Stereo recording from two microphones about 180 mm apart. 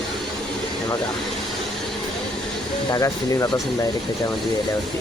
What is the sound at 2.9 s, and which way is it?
Speech, 20° left (ahead or behind).